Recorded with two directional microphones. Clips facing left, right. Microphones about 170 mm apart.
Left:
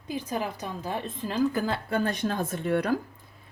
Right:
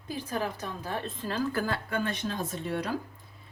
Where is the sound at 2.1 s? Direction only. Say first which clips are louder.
Left 4 dB; 50° left (ahead or behind).